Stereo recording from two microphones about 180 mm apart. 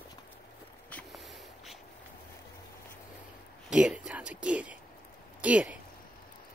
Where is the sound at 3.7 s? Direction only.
5° right (ahead or behind).